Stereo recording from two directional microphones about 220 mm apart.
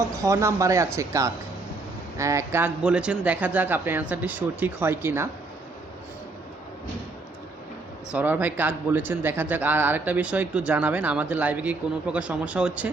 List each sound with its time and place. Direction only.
0.3 s speech: 15° right (ahead or behind)
8.1 s speech: 10° right (ahead or behind)